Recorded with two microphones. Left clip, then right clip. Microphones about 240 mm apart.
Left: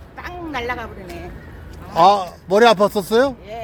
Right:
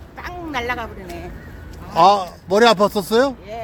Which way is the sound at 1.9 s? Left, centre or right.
Centre.